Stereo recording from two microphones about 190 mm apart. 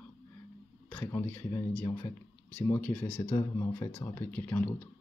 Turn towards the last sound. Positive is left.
turn(degrees=10)  # may be behind; listen again after turning